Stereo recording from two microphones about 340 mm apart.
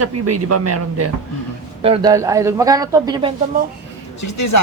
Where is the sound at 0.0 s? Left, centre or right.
Right.